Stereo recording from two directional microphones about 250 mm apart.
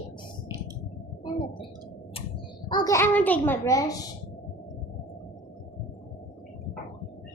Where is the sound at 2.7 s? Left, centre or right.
Centre.